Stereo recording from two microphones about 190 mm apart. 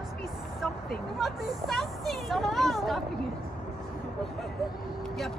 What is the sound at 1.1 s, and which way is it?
Speech, centre (ahead or behind).